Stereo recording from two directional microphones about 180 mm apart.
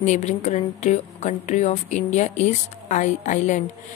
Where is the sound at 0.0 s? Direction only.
40° left (ahead or behind).